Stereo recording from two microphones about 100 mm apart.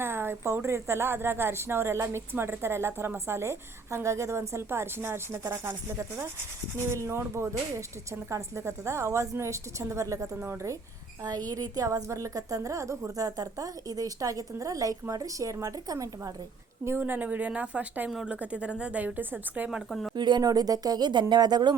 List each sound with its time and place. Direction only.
0.0 s a woman's voice: 25° right (ahead or behind)
16.8 s a woman's voice: 25° right (ahead or behind)
18.1 s a woman's voice: 5° right (ahead or behind)
19.9 s speech: centre (ahead or behind)
20.1 s speech: 45° right (ahead or behind)